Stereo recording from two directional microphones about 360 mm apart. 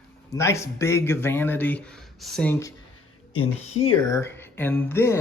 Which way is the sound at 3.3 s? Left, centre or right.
Left.